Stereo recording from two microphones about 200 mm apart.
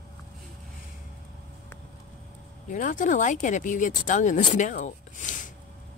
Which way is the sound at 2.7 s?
40° left (ahead or behind).